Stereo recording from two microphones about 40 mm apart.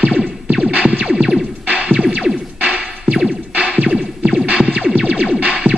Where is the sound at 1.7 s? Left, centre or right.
Right.